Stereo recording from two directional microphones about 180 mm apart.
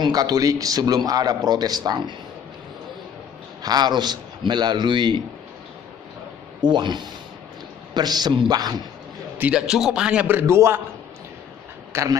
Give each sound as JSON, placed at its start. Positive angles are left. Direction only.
{"t": 0.0, "sound": "speech", "side_deg": -20}
{"t": 3.6, "sound": "speech", "side_deg": -25}
{"t": 6.6, "sound": "speech", "side_deg": -25}
{"t": 9.4, "sound": "a man's voice", "side_deg": -5}
{"t": 11.9, "sound": "speech", "side_deg": -15}